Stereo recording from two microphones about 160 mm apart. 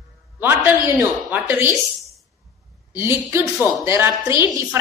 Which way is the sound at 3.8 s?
15° right (ahead or behind).